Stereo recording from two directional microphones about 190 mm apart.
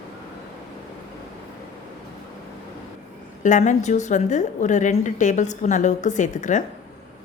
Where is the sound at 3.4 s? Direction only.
40° left (ahead or behind).